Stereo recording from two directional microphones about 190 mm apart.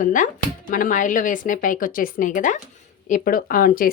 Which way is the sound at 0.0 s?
45° left (ahead or behind).